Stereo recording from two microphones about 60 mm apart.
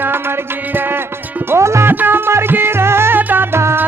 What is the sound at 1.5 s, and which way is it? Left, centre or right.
Music, right.